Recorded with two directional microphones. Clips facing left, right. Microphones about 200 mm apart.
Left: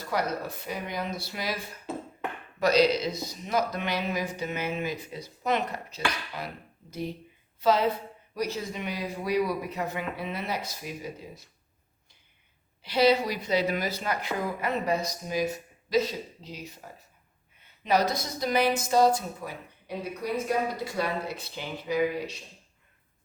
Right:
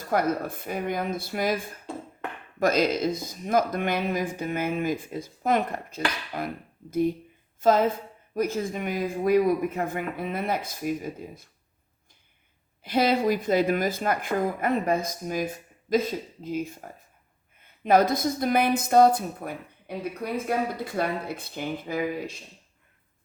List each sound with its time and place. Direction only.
0.0 s speech: 50° right (ahead or behind)
12.8 s speech: 50° right (ahead or behind)